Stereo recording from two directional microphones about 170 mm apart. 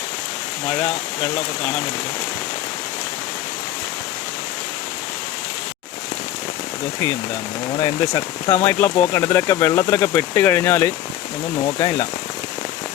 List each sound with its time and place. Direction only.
7.8 s speech: 20° left (ahead or behind)